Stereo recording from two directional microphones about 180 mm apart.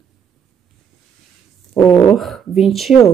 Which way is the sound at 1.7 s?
5° left (ahead or behind).